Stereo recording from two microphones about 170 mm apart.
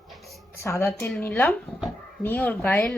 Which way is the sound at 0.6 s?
15° left (ahead or behind).